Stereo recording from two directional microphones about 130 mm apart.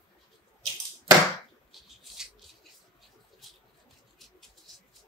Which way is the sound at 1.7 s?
Centre (ahead or behind).